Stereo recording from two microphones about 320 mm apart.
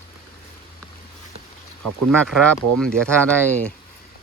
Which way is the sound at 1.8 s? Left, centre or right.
Right.